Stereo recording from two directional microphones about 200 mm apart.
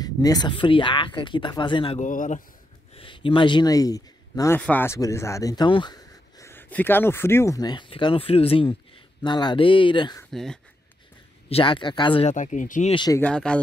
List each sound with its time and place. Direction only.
0.0 s speech: 20° left (ahead or behind)
2.0 s a man's voice: 40° left (ahead or behind)
2.9 s speech: 25° left (ahead or behind)
10.3 s speech: centre (ahead or behind)
11.4 s speech: 25° left (ahead or behind)
12.9 s speech: 20° left (ahead or behind)
13.2 s speech: 5° left (ahead or behind)